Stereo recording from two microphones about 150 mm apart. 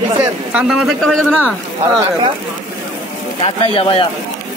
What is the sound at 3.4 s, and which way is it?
Speech, 40° left (ahead or behind).